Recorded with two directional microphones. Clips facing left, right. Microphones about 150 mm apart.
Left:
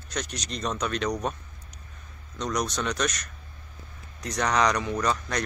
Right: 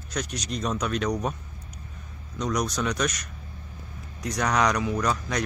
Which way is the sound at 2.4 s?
5° right (ahead or behind).